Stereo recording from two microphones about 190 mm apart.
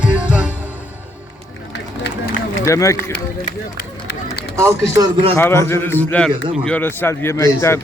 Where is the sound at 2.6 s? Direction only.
15° left (ahead or behind).